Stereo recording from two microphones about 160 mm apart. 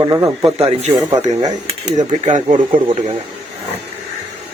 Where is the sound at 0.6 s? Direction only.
40° right (ahead or behind).